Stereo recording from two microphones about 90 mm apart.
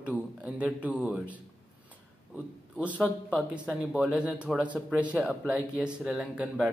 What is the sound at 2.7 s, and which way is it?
A man's voice, 15° right (ahead or behind).